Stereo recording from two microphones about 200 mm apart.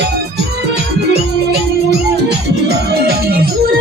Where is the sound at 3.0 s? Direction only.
50° right (ahead or behind).